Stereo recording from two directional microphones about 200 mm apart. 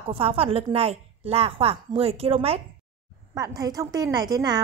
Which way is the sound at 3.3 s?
20° right (ahead or behind).